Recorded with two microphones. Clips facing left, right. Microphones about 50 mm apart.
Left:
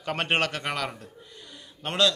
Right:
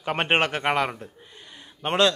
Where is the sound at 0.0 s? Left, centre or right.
Right.